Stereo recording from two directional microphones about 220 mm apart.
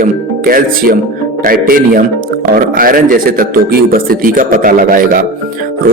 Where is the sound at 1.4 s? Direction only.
40° right (ahead or behind).